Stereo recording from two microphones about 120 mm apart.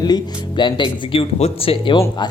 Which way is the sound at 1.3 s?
60° left (ahead or behind).